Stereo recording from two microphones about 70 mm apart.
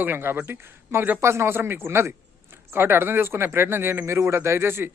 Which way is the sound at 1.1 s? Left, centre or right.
Right.